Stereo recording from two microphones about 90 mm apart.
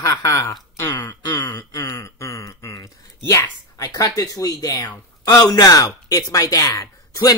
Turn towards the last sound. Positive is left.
turn(degrees=40)  # may be behind; listen again after turning